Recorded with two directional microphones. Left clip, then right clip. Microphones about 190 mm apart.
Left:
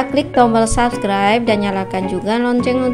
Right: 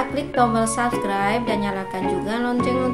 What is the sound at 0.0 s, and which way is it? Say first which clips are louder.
Speech: left 7 dB; 40° left (ahead or behind).